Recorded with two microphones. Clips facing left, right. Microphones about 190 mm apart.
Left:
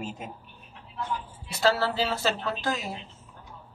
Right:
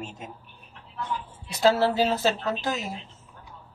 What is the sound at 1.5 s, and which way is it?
Speech, 20° right (ahead or behind).